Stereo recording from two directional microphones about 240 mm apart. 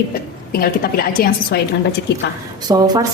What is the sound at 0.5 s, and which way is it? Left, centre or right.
A woman's voice, left.